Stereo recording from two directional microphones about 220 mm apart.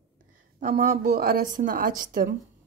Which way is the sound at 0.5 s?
35° right (ahead or behind).